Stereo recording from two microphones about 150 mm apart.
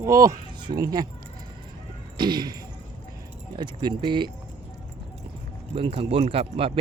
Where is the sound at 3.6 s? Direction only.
30° right (ahead or behind).